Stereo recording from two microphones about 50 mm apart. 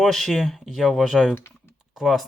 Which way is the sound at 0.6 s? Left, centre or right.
Centre.